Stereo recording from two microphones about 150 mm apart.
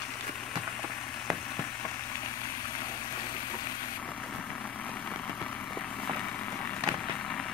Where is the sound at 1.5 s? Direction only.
15° left (ahead or behind).